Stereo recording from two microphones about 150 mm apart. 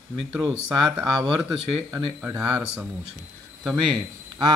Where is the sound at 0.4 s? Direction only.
25° right (ahead or behind).